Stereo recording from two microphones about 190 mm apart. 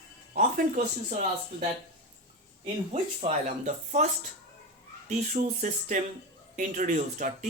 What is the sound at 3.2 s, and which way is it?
Speech, 35° right (ahead or behind).